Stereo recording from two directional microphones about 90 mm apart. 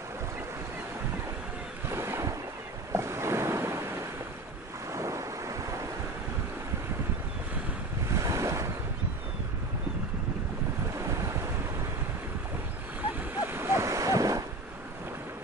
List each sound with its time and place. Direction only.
1.9 s boat: 30° right (ahead or behind)
2.9 s ocean: 30° right (ahead or behind)
4.9 s waves: 35° right (ahead or behind)
8.1 s waves: 35° right (ahead or behind)
11.0 s waves: 30° right (ahead or behind)
13.3 s a sound: 25° right (ahead or behind)